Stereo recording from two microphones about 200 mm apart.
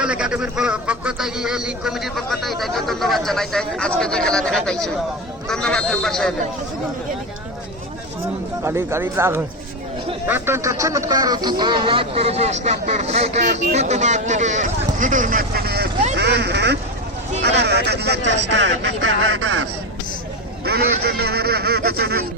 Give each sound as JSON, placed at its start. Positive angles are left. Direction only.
{"t": 0.0, "sound": "speech", "side_deg": -5}
{"t": 8.6, "sound": "speech", "side_deg": -15}
{"t": 20.7, "sound": "a man's voice", "side_deg": -55}